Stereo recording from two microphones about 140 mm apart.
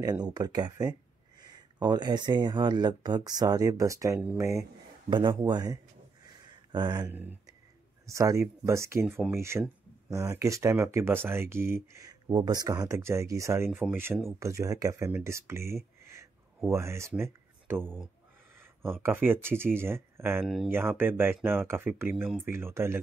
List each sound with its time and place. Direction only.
0.0 s speech: 30° right (ahead or behind)
4.2 s speech: 10° right (ahead or behind)
5.1 s speech: 30° right (ahead or behind)
6.2 s a sound: 30° right (ahead or behind)
7.1 s speech: 15° right (ahead or behind)
18.6 s a sound: 15° right (ahead or behind)
19.0 s speech: 15° right (ahead or behind)
20.4 s speech: centre (ahead or behind)
20.7 s speech: 15° right (ahead or behind)